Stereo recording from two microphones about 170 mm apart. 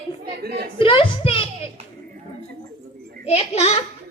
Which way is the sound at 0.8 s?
30° left (ahead or behind).